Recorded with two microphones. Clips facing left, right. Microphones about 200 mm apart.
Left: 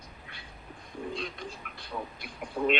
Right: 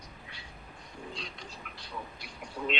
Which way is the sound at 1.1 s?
55° left (ahead or behind).